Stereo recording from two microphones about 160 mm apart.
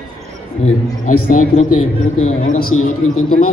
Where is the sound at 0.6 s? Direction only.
55° left (ahead or behind).